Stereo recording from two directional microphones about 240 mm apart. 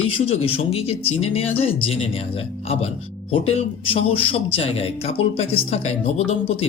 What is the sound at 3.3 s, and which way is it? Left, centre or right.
Speech, left.